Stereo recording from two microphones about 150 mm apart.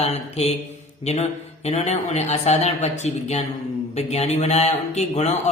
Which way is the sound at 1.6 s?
45° left (ahead or behind).